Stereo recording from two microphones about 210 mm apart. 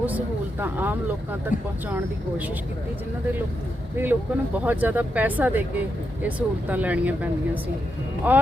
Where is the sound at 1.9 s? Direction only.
10° right (ahead or behind).